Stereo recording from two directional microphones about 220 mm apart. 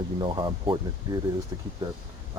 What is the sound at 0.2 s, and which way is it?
Speech, 20° right (ahead or behind).